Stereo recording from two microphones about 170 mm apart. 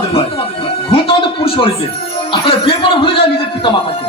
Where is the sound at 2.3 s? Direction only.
30° left (ahead or behind).